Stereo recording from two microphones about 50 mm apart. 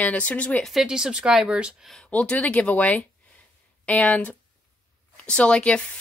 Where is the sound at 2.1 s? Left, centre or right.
Left.